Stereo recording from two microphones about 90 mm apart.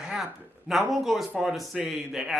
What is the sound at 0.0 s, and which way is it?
Speech, 5° right (ahead or behind).